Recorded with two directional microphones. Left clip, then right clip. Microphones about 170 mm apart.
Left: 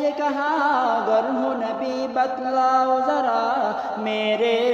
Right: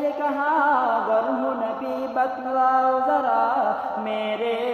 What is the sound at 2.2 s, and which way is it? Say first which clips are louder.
Mantra: left 1 dB; 20° left (ahead or behind).